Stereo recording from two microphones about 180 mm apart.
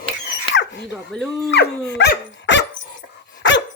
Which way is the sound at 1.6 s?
65° left (ahead or behind).